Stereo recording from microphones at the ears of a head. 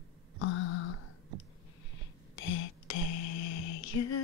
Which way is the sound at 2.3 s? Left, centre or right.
Left.